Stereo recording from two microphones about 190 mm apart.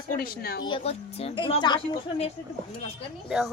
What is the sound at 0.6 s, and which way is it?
Speech, 30° left (ahead or behind).